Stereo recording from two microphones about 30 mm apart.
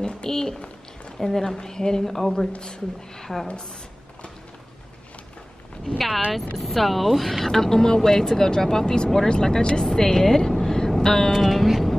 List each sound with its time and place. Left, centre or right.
0.0 s speech: left
5.9 s speech: centre